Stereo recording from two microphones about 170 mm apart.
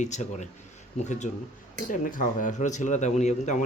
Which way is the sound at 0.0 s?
45° left (ahead or behind).